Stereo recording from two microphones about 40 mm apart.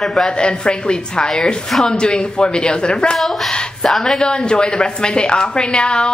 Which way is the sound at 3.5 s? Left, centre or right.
Centre.